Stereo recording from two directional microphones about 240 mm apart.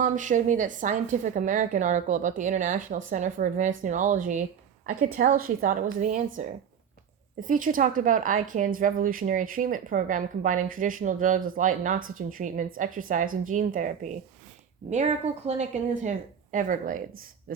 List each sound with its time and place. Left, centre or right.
0.0 s a woman's voice: right